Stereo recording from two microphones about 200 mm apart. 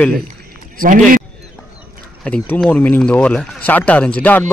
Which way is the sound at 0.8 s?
45° right (ahead or behind).